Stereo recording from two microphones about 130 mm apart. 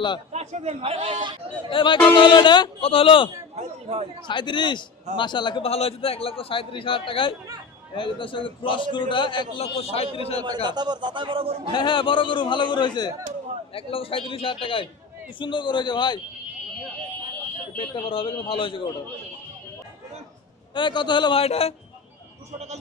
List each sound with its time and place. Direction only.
0.3 s a man's voice: 60° right (ahead or behind)
1.7 s a man's voice: 40° left (ahead or behind)
3.5 s a man's voice: 55° right (ahead or behind)
4.3 s a man's voice: 40° left (ahead or behind)
5.7 s a man's voice: 50° left (ahead or behind)
9.6 s a man's voice: 50° left (ahead or behind)
10.4 s a man's voice: 35° right (ahead or behind)
11.7 s a man's voice: 40° left (ahead or behind)
13.7 s a man's voice: 45° left (ahead or behind)
17.7 s a man's voice: 40° left (ahead or behind)
20.7 s a man's voice: 35° left (ahead or behind)